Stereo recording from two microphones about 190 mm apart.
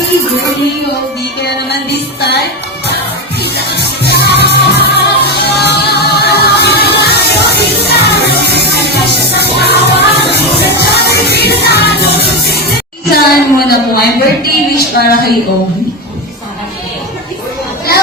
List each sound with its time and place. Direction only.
1.4 s music: 60° left (ahead or behind)
12.5 s a woman's voice: 55° left (ahead or behind)